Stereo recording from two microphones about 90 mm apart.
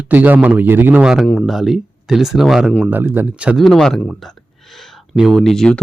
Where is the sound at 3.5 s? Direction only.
5° left (ahead or behind).